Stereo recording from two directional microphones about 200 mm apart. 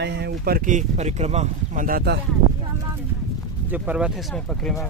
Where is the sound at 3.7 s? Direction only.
5° right (ahead or behind).